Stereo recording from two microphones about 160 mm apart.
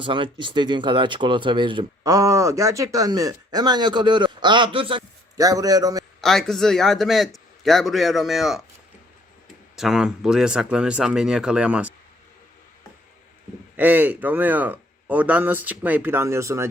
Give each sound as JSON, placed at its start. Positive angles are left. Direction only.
{"t": 0.0, "sound": "speech", "side_deg": -30}
{"t": 5.4, "sound": "speech", "side_deg": -20}
{"t": 6.2, "sound": "a man's voice", "side_deg": 0}
{"t": 9.7, "sound": "a man's voice", "side_deg": 0}
{"t": 13.7, "sound": "speech", "side_deg": -10}